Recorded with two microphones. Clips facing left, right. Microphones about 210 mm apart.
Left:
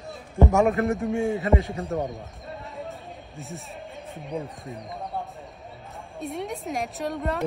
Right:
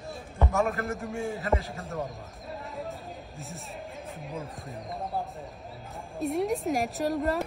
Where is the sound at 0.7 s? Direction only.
Centre (ahead or behind).